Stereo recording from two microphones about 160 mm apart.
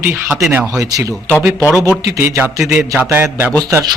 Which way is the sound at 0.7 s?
20° right (ahead or behind).